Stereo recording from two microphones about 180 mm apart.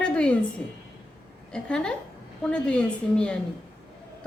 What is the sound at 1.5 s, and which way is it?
A woman's voice, 5° left (ahead or behind).